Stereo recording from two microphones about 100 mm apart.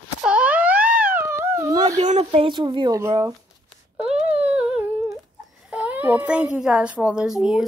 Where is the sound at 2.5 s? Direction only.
50° right (ahead or behind).